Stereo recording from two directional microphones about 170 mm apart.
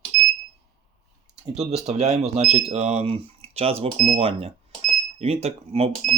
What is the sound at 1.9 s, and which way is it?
Speech, 40° right (ahead or behind).